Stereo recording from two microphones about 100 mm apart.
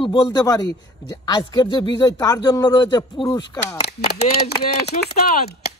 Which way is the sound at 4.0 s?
90° left.